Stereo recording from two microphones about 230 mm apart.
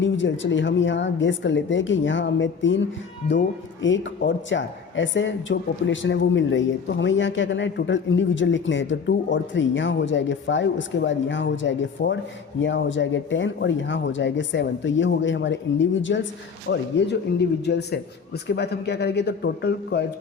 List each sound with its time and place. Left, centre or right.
0.0 s a man's voice: left